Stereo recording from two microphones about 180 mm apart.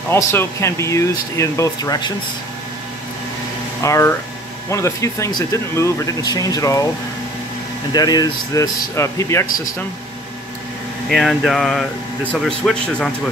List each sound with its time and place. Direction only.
0.1 s speech: 15° left (ahead or behind)
3.8 s speech: 15° left (ahead or behind)
7.9 s speech: 20° left (ahead or behind)
11.1 s speech: centre (ahead or behind)